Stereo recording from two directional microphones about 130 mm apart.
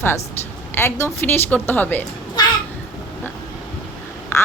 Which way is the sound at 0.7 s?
15° left (ahead or behind).